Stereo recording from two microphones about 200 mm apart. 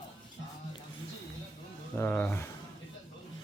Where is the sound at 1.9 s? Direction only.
10° left (ahead or behind).